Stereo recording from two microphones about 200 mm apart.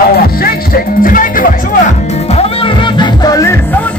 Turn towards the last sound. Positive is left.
turn(degrees=15)  # may be behind; listen again after turning